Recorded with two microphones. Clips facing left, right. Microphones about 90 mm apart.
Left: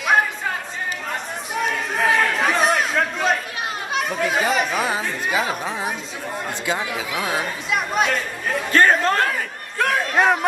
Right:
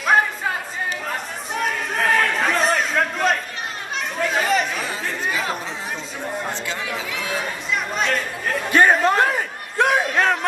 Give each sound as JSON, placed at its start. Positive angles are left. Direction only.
{"t": 1.5, "sound": "chatter", "side_deg": 0}
{"t": 3.9, "sound": "speech", "side_deg": 5}
{"t": 4.8, "sound": "speech", "side_deg": 15}
{"t": 8.6, "sound": "a sound", "side_deg": -10}
{"t": 10.1, "sound": "speech", "side_deg": 10}